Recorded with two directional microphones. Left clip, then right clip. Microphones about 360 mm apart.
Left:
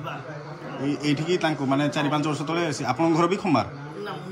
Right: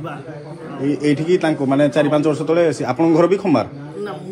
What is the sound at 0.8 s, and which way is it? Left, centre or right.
A man's voice, centre.